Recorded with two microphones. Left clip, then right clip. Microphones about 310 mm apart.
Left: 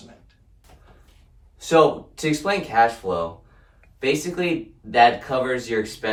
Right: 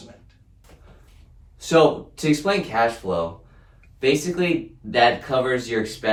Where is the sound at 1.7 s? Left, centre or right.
Centre.